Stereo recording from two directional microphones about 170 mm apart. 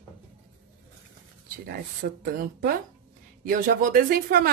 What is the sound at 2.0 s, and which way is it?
Speech, 65° right (ahead or behind).